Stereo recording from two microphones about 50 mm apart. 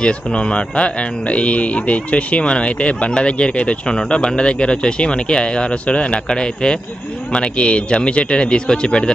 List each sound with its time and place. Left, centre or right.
0.0 s speech: centre